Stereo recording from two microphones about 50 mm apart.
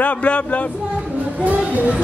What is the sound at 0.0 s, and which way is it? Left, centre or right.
Speech, left.